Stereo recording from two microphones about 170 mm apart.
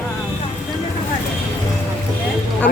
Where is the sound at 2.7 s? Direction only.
60° left (ahead or behind).